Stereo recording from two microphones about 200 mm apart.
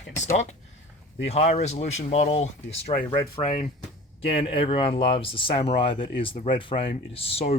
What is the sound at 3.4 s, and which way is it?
Speech, 45° left (ahead or behind).